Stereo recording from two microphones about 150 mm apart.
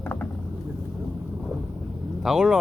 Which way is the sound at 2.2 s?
5° right (ahead or behind).